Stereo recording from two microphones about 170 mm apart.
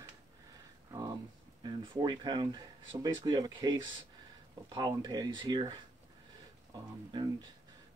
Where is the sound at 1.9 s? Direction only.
25° right (ahead or behind).